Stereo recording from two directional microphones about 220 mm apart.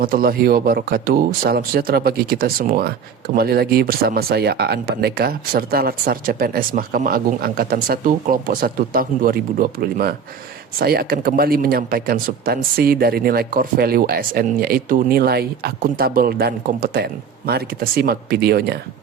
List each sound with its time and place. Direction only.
0.0 s speech: 40° right (ahead or behind)